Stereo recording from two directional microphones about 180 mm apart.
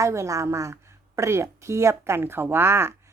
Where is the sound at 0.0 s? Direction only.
15° right (ahead or behind).